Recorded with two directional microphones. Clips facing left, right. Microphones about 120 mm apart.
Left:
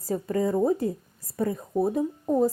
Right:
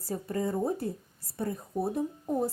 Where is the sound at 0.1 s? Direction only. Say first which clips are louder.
Left 6 dB; 90° left.